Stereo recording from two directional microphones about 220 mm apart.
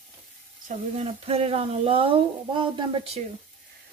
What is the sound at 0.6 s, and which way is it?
Speech, 30° right (ahead or behind).